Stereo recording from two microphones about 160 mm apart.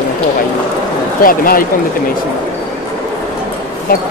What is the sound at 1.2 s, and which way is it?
Speech, 65° left (ahead or behind).